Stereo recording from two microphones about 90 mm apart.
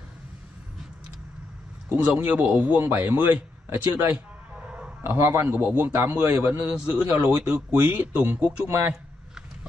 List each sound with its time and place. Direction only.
2.1 s speech: 20° right (ahead or behind)
5.0 s a man's voice: 30° right (ahead or behind)